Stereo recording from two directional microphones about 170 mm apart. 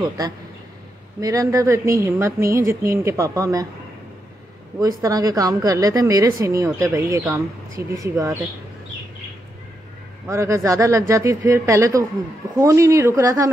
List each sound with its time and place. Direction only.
1.2 s a woman's voice: 20° right (ahead or behind)
4.7 s a woman's voice: 20° right (ahead or behind)
10.2 s a woman's voice: 15° right (ahead or behind)